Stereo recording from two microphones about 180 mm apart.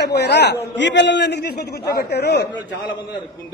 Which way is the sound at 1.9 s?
65° left (ahead or behind).